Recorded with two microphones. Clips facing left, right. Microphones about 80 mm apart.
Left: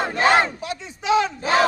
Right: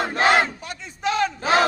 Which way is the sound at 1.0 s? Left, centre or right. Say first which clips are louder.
Left 3 dB; centre.